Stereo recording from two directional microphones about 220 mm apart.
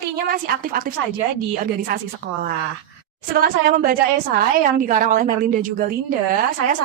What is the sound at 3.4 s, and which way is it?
Speech, 40° right (ahead or behind).